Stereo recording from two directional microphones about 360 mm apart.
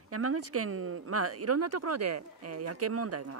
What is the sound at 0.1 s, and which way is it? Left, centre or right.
Speech, right.